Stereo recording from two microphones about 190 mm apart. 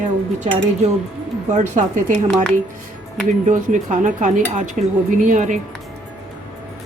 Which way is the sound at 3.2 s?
40° right (ahead or behind).